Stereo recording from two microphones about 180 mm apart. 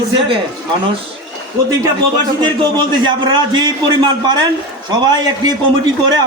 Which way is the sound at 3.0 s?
25° right (ahead or behind).